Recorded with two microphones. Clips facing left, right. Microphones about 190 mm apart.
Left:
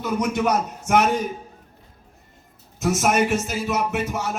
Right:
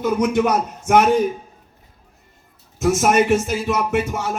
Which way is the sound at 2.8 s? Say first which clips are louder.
Right 4 dB; 50° right (ahead or behind).